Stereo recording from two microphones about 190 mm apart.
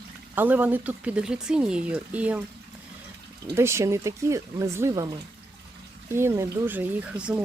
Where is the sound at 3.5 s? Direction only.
15° right (ahead or behind).